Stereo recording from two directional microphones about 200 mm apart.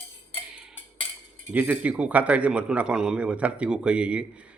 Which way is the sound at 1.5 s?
10° right (ahead or behind).